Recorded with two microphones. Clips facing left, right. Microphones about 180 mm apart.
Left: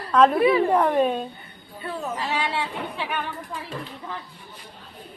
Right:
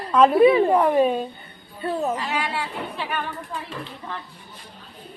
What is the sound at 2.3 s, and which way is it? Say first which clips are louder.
Speech: even; 30° left (ahead or behind).